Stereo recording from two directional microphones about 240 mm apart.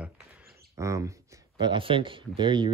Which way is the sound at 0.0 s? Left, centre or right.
Centre.